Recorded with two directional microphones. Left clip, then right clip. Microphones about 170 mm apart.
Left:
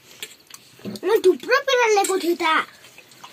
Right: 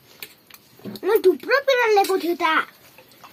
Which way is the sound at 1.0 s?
25° left (ahead or behind).